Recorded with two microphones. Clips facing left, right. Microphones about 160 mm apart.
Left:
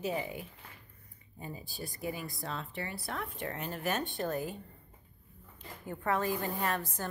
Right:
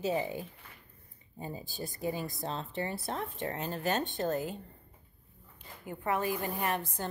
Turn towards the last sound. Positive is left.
turn(degrees=-15)  # may be behind; listen again after turning